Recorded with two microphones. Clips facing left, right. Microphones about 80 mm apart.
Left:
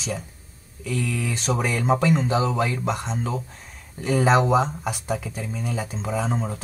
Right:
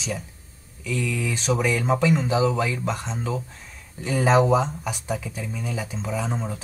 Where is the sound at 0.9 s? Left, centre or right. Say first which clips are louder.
Even; left.